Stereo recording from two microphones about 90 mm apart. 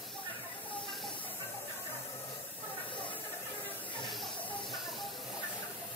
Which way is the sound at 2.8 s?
65° left (ahead or behind).